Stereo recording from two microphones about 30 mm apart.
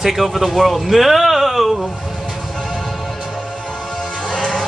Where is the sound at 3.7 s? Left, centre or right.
Left.